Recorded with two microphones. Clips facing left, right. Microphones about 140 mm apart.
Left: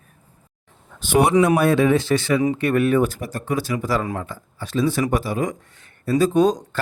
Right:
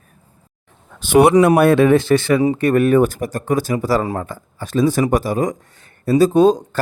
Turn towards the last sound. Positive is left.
turn(degrees=-30)  # may be behind; listen again after turning